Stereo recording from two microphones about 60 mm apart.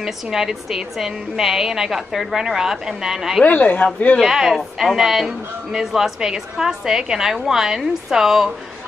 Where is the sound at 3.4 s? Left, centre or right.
Left.